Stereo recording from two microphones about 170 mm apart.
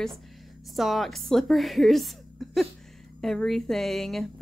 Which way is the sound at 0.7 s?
Centre (ahead or behind).